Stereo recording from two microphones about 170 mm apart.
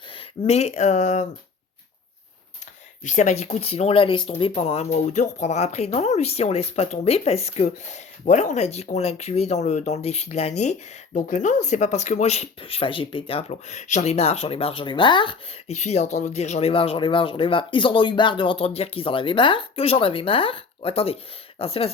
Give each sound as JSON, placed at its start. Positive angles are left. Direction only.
{"t": 0.1, "sound": "speech", "side_deg": 35}
{"t": 3.0, "sound": "speech", "side_deg": 45}